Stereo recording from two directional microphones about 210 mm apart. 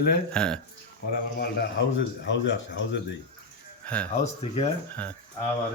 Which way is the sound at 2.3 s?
60° left (ahead or behind).